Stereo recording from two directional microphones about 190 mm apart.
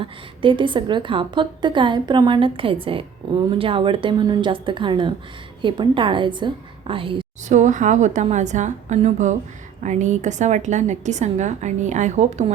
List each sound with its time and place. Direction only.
0.0 s a woman's voice: 25° right (ahead or behind)
7.4 s a woman's voice: 40° right (ahead or behind)